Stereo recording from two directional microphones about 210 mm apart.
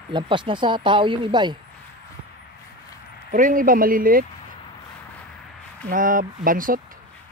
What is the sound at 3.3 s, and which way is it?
Speech, 40° right (ahead or behind).